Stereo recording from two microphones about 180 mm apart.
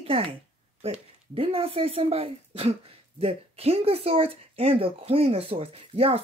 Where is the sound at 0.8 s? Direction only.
35° right (ahead or behind).